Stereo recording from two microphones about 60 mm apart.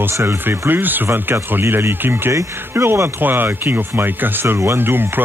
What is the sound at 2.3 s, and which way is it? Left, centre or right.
Speech, right.